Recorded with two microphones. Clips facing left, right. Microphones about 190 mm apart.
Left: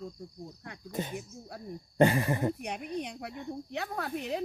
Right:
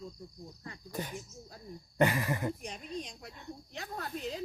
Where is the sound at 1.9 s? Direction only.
30° left (ahead or behind).